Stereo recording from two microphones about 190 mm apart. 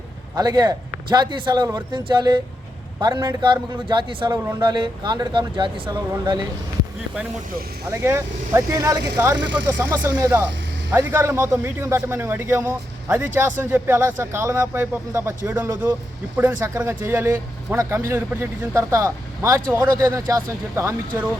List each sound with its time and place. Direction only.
0.3 s a man's voice: 20° right (ahead or behind)
7.9 s speech: 15° right (ahead or behind)